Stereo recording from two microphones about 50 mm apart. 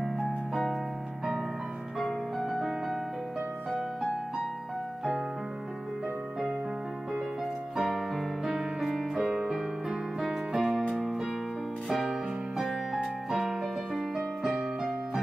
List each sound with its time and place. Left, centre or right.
0.0 s music: centre
2.0 s music: centre
7.7 s music: centre